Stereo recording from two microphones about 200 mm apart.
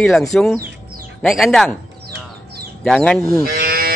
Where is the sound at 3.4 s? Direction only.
50° right (ahead or behind).